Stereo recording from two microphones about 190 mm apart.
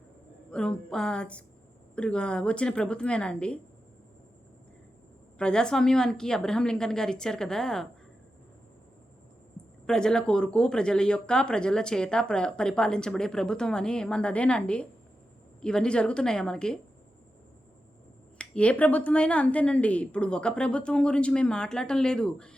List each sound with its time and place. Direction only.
0.5 s speech: 5° left (ahead or behind)
5.4 s speech: 5° left (ahead or behind)
9.8 s speech: 5° left (ahead or behind)
18.3 s speech: 5° left (ahead or behind)